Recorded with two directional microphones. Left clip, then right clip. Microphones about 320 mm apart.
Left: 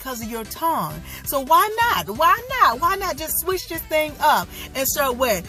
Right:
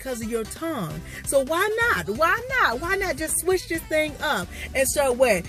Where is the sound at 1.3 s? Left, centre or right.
Centre.